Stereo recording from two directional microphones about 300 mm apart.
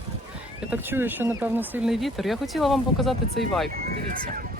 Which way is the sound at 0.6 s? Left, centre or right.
Centre.